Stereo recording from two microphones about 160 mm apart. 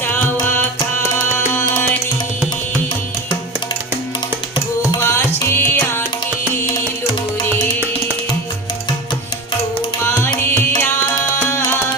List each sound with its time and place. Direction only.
4.9 s tabla: 20° left (ahead or behind)
6.7 s music: 25° left (ahead or behind)
10.1 s music: 15° left (ahead or behind)